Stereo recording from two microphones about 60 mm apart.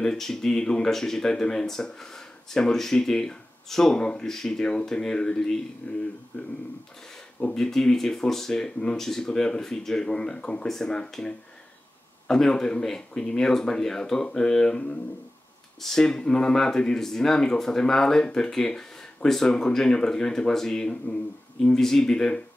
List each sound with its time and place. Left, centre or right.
0.0 s speech: centre
5.8 s speech: left
7.5 s speech: centre